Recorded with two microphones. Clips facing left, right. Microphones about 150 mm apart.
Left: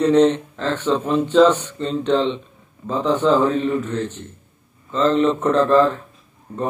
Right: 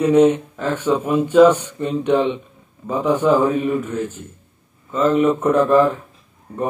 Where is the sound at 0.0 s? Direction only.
10° right (ahead or behind).